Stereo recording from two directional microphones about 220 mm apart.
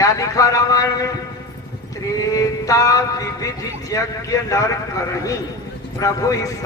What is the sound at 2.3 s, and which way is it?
Mantra, 15° left (ahead or behind).